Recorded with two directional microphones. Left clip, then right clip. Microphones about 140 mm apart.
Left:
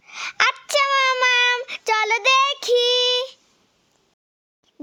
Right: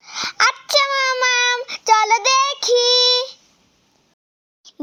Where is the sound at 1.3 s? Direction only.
50° left (ahead or behind).